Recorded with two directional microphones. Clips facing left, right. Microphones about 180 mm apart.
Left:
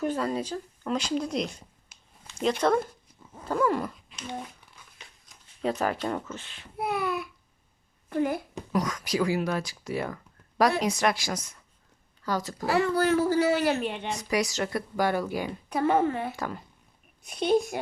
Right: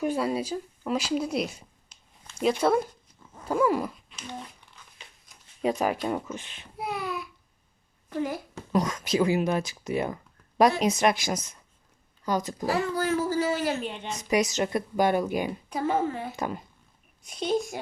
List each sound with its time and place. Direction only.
0.0 s a woman's voice: 10° right (ahead or behind)
1.9 s a sound: 10° left (ahead or behind)
2.4 s a woman's voice: 5° right (ahead or behind)
3.4 s dog: 10° right (ahead or behind)
4.8 s crumpling: 10° left (ahead or behind)
5.6 s a woman's voice: 10° right (ahead or behind)
6.7 s a sound: 55° left (ahead or behind)
8.1 s speech: 55° left (ahead or behind)
8.7 s speech: 25° right (ahead or behind)
12.6 s speech: 65° left (ahead or behind)
14.1 s speech: 20° right (ahead or behind)
15.7 s speech: 65° left (ahead or behind)
16.3 s speech: 20° right (ahead or behind)
17.2 s speech: 60° left (ahead or behind)